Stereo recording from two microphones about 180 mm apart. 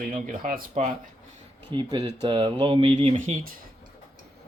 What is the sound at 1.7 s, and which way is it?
Speech, 25° right (ahead or behind).